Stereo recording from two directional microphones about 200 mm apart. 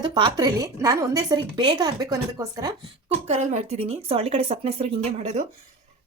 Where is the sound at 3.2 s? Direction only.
35° right (ahead or behind).